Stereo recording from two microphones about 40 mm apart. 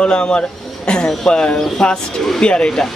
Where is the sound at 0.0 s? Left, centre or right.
Left.